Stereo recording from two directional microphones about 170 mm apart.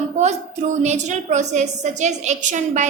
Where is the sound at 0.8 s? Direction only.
45° right (ahead or behind).